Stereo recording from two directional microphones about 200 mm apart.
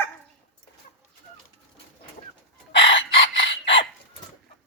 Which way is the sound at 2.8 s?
65° left (ahead or behind).